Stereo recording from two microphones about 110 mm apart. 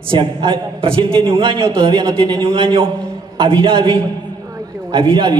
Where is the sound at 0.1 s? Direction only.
50° right (ahead or behind).